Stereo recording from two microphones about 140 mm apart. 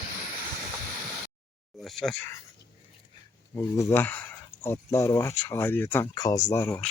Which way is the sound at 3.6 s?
20° left (ahead or behind).